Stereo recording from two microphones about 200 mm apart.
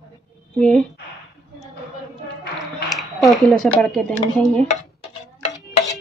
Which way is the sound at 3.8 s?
5° left (ahead or behind).